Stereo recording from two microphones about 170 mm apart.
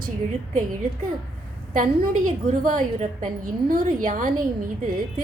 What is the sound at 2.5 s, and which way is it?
A woman's voice, 50° right (ahead or behind).